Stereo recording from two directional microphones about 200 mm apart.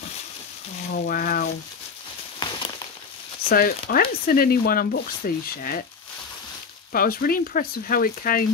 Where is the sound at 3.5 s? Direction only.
45° left (ahead or behind).